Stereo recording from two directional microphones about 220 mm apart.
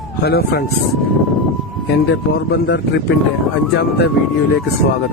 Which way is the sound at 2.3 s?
45° left (ahead or behind).